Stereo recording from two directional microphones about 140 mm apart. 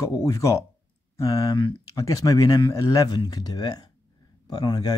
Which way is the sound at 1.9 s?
25° left (ahead or behind).